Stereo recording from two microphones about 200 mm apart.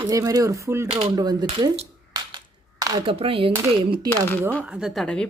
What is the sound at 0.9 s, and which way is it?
Speech, 30° right (ahead or behind).